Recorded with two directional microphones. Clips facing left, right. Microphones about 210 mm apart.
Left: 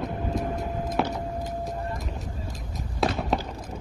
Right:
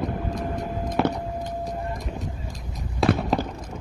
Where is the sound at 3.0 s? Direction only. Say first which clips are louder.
Right 5 dB; centre (ahead or behind).